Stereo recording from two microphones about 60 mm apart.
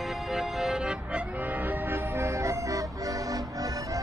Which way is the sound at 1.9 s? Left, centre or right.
Right.